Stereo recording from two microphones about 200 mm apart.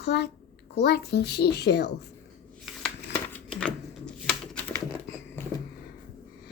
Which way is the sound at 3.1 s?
5° left (ahead or behind).